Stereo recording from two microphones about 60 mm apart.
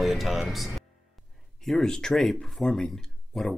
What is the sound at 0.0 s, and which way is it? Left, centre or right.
Speech, centre.